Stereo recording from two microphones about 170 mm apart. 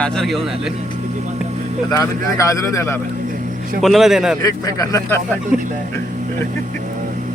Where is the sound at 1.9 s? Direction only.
20° left (ahead or behind).